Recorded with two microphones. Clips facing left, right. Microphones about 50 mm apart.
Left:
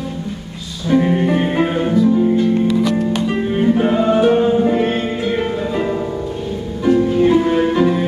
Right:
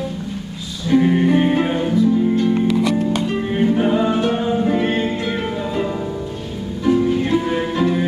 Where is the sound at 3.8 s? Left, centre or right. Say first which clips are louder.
Left 4 dB; centre.